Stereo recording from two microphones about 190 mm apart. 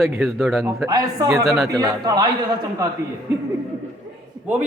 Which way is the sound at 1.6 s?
20° right (ahead or behind).